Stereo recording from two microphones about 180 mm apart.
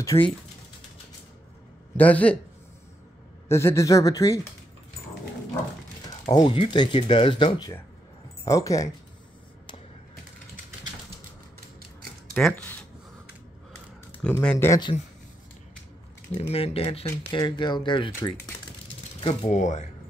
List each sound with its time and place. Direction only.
0.1 s speech: 30° left (ahead or behind)
2.0 s speech: 10° left (ahead or behind)
3.4 s speech: 15° left (ahead or behind)
6.2 s speech: 25° left (ahead or behind)
12.4 s speech: 5° left (ahead or behind)
14.2 s speech: 5° left (ahead or behind)
14.7 s speech: 25° left (ahead or behind)
16.3 s speech: 35° left (ahead or behind)
19.2 s speech: 40° left (ahead or behind)